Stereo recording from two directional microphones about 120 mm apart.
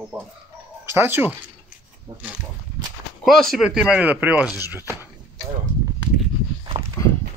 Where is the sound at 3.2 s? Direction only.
Centre (ahead or behind); by 5.0 s 20° right (ahead or behind).